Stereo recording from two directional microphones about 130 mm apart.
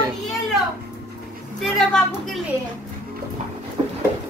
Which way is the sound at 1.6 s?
5° left (ahead or behind).